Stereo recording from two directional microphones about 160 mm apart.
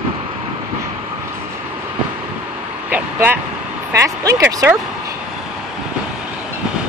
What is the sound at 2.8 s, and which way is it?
Vehicle, 10° right (ahead or behind).